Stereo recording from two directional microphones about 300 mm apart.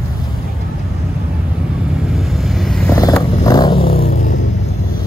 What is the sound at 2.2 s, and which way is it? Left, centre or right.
Vehicle, centre.